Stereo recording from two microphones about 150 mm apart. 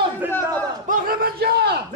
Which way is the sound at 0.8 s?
70° right (ahead or behind).